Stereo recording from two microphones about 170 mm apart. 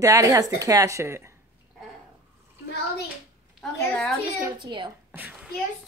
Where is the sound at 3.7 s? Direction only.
10° left (ahead or behind).